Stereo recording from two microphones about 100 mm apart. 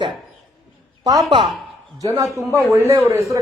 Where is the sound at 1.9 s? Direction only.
35° right (ahead or behind).